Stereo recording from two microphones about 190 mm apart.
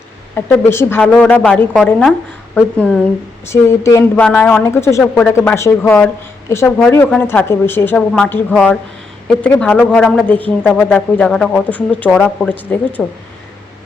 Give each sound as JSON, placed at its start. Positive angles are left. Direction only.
{"t": 0.3, "sound": "a woman's voice", "side_deg": 10}
{"t": 3.4, "sound": "a woman's voice", "side_deg": 15}